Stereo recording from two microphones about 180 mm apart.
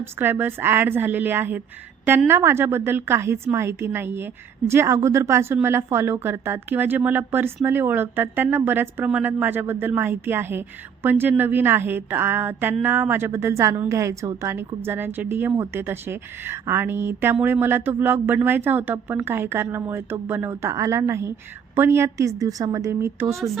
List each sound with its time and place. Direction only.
0.0 s a woman's voice: 10° right (ahead or behind)